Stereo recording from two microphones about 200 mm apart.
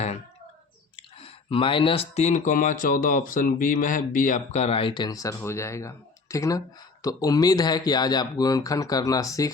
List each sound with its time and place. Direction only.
1.2 s speech: 25° left (ahead or behind)